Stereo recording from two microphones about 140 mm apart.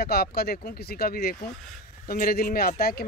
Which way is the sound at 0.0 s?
90° left.